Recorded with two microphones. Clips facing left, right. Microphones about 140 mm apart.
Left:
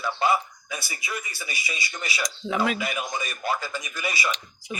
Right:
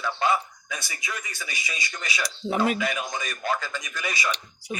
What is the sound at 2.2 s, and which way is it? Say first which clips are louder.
Speech: right 1 dB; 40° right (ahead or behind).